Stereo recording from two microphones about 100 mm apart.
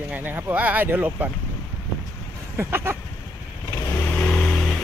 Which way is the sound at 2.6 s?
25° right (ahead or behind).